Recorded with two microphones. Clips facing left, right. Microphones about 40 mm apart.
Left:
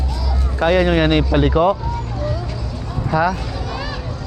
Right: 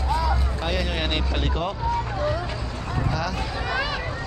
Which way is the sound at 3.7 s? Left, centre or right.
Right.